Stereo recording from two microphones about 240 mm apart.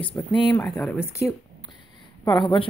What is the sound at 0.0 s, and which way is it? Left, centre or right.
Speech, centre.